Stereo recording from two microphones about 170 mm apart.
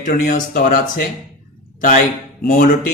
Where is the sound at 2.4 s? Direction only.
60° left (ahead or behind).